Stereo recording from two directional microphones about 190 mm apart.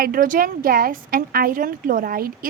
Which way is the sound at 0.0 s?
50° right (ahead or behind).